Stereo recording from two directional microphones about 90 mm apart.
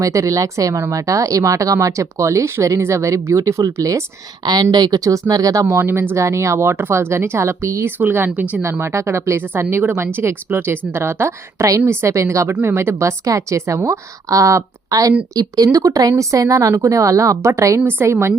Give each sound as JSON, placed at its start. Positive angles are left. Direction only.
{"t": 0.0, "sound": "speech", "side_deg": -35}
{"t": 4.4, "sound": "speech", "side_deg": -50}
{"t": 7.9, "sound": "a woman's voice", "side_deg": -25}
{"t": 8.8, "sound": "a woman's voice", "side_deg": -30}